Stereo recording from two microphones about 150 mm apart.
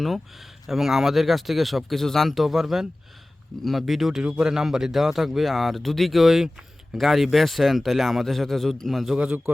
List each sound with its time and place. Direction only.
0.0 s a man's voice: centre (ahead or behind)